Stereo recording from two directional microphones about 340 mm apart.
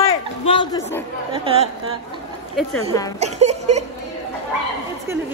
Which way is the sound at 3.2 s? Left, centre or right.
Centre.